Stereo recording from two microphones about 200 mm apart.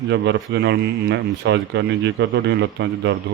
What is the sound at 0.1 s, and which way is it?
Speech, 60° right (ahead or behind).